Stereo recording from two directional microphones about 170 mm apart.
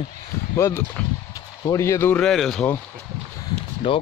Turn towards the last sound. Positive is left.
turn(degrees=35)  # may be behind; listen again after turning